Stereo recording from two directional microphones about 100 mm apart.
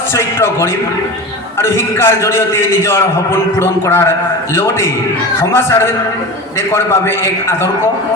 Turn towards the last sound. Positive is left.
turn(degrees=25)  # may be behind; listen again after turning